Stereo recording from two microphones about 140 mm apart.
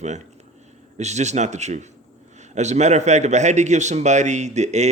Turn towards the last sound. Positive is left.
turn(degrees=-55)  # may be behind; listen again after turning